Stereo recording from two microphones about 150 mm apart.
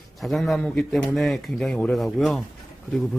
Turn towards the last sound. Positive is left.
turn(degrees=0)  # may be behind; listen again after turning